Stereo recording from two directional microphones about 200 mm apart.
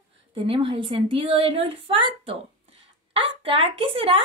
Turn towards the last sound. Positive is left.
turn(degrees=-25)  # may be behind; listen again after turning